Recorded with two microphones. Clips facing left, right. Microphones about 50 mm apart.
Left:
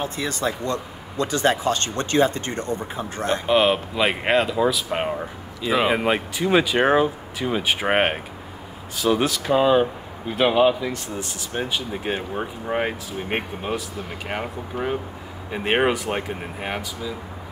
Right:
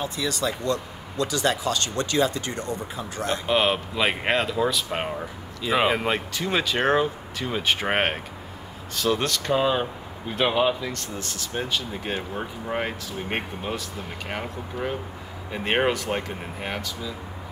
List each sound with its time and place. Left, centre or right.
0.0 s speech: left
3.4 s speech: centre
5.9 s speech: centre